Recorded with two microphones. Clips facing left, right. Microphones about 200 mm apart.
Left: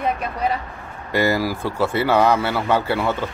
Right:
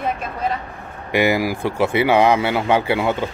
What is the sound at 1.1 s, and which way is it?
Speech, 15° right (ahead or behind).